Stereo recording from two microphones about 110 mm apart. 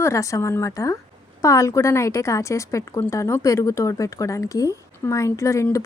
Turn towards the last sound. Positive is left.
turn(degrees=25)  # may be behind; listen again after turning